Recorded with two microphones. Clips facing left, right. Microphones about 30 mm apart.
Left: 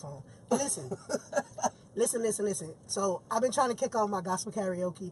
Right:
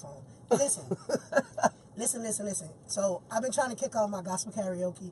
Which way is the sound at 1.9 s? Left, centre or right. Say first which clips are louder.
Left 7 dB; left.